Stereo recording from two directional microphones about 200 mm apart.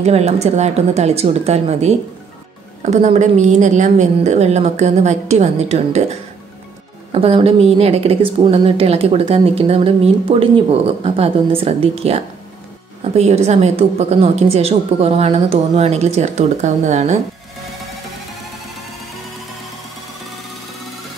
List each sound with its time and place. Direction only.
0.0 s a woman's voice: 35° right (ahead or behind)
7.1 s a woman's voice: 30° right (ahead or behind)